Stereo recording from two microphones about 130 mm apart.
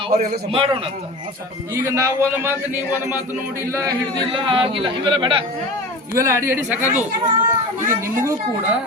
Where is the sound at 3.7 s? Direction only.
25° right (ahead or behind).